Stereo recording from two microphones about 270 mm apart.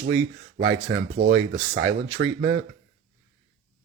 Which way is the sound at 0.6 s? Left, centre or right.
Right.